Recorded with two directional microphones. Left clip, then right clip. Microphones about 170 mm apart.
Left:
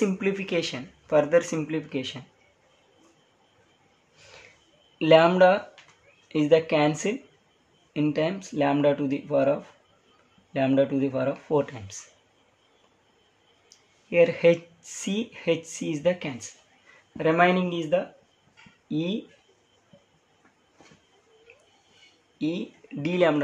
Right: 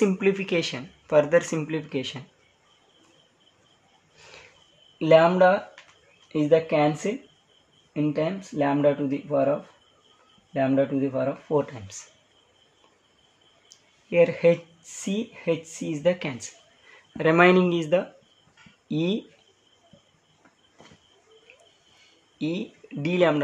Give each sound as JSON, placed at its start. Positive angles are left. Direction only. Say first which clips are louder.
{"t": 0.0, "sound": "speech", "louder": "right 4 dB", "side_deg": -20}
{"t": 4.9, "sound": "speech", "louder": "even", "side_deg": 0}
{"t": 14.1, "sound": "speech", "louder": "even", "side_deg": 0}
{"t": 17.2, "sound": "speech", "louder": "right 3 dB", "side_deg": -30}
{"t": 22.4, "sound": "speech", "louder": "even", "side_deg": -10}